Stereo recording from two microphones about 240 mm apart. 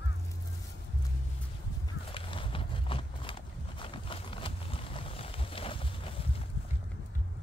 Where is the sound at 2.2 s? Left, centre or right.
Left.